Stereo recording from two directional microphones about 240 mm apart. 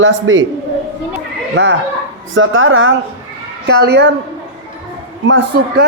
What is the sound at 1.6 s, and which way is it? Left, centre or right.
A woman's voice, right.